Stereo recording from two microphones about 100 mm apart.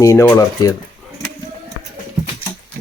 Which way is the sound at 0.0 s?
30° left (ahead or behind).